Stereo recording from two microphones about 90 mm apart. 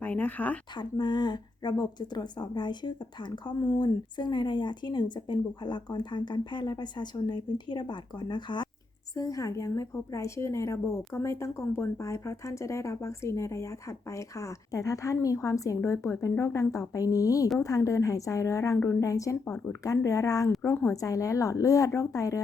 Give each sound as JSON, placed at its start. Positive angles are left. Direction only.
{"t": 0.0, "sound": "speech", "side_deg": 20}
{"t": 0.8, "sound": "a woman's voice", "side_deg": 55}
{"t": 9.1, "sound": "a woman's voice", "side_deg": 40}